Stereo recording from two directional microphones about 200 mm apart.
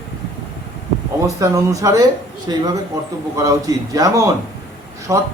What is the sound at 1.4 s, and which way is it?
A man's voice, 15° right (ahead or behind).